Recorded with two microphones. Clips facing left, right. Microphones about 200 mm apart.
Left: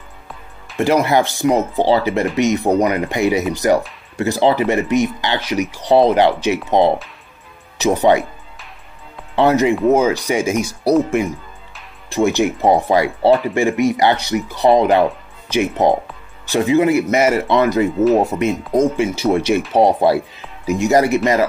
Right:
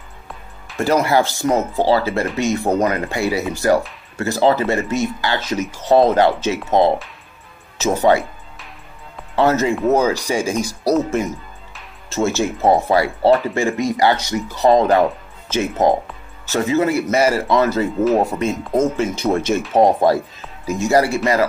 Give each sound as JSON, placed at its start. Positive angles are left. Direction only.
{"t": 0.7, "sound": "speech", "side_deg": 15}
{"t": 7.7, "sound": "speech", "side_deg": 15}
{"t": 9.3, "sound": "speech", "side_deg": 15}
{"t": 17.9, "sound": "speech", "side_deg": 0}
{"t": 18.4, "sound": "speech", "side_deg": 15}